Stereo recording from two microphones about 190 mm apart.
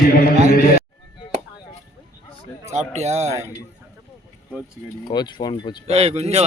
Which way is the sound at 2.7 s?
35° right (ahead or behind).